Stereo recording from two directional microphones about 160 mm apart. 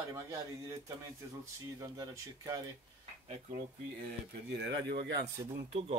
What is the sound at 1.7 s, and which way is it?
Speech, 20° right (ahead or behind).